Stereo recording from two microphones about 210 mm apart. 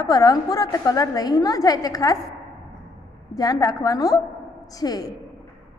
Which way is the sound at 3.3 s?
15° left (ahead or behind).